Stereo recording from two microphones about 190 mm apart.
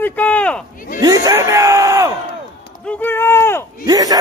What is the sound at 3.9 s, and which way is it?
Speech, 20° right (ahead or behind).